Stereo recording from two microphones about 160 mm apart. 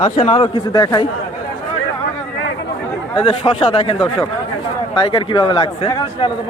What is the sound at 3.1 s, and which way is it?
A man's voice, 35° left (ahead or behind).